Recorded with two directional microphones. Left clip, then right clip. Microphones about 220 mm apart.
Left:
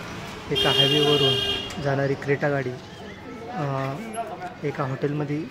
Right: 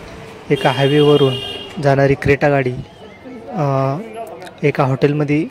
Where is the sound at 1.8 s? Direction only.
40° right (ahead or behind).